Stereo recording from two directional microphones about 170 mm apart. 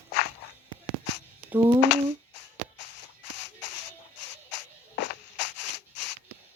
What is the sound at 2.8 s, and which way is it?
Shuffle, 90° left.